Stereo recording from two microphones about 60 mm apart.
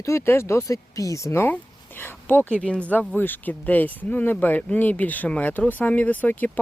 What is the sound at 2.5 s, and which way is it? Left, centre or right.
Speech, centre.